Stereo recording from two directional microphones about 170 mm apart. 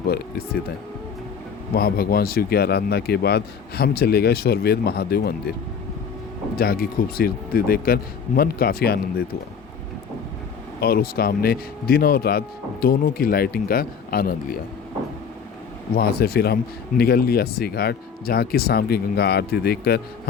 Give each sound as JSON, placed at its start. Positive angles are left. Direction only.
{"t": 0.1, "sound": "speech", "side_deg": 65}
{"t": 1.7, "sound": "speech", "side_deg": 65}
{"t": 6.6, "sound": "speech", "side_deg": 60}
{"t": 10.8, "sound": "speech", "side_deg": 60}
{"t": 16.0, "sound": "speech", "side_deg": 65}